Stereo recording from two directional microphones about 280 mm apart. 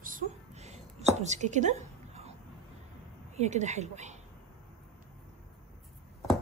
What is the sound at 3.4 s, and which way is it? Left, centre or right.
Speech, right.